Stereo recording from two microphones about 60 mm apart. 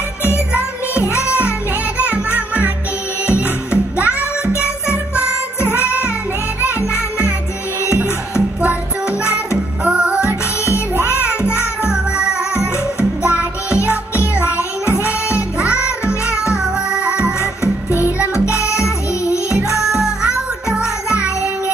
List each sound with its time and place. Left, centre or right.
1.0 s music: left
2.0 s music: right
4.2 s music: left
9.8 s music: right
10.1 s music: left
11.4 s music: centre
14.1 s music: left
15.6 s music: centre
17.9 s music: right
18.3 s music: left
19.8 s music: centre